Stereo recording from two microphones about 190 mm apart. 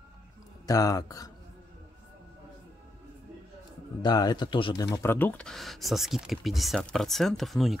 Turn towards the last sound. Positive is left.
turn(degrees=0)  # may be behind; listen again after turning